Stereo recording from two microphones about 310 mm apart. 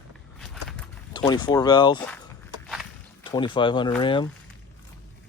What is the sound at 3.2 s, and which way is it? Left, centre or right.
Speech, centre.